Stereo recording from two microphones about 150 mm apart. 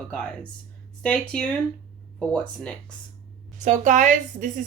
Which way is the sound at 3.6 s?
55° right (ahead or behind).